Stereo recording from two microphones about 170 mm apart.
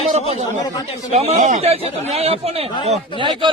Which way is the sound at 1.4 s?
50° right (ahead or behind).